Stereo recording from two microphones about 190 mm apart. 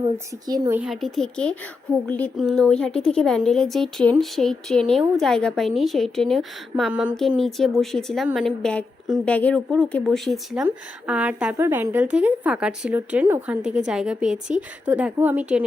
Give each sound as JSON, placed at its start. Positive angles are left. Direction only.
{"t": 0.4, "sound": "speech", "side_deg": -20}
{"t": 0.8, "sound": "a woman's voice", "side_deg": 0}